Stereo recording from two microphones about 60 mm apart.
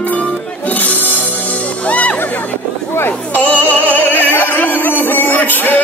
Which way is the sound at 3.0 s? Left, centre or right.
Left.